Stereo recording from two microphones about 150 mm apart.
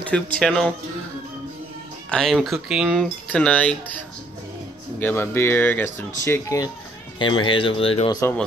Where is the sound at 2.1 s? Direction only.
5° left (ahead or behind).